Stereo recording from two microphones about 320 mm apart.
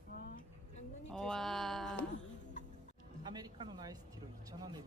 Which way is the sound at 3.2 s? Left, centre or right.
Centre.